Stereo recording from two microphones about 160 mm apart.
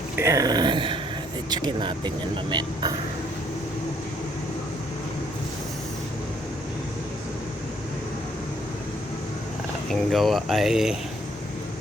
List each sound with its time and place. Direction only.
0.2 s speech: 20° right (ahead or behind)
9.9 s speech: centre (ahead or behind)